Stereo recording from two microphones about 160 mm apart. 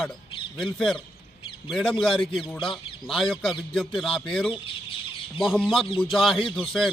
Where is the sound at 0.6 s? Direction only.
Centre (ahead or behind).